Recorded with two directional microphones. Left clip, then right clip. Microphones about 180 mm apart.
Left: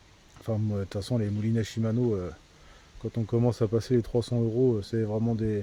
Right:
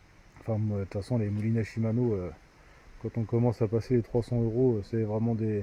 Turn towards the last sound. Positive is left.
turn(degrees=10)  # may be behind; listen again after turning